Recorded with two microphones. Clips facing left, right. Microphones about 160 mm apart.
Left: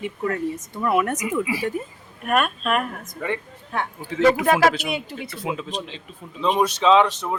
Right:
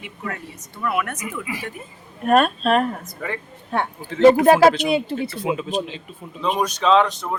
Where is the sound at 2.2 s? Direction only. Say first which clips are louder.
Right 5 dB; 35° right (ahead or behind).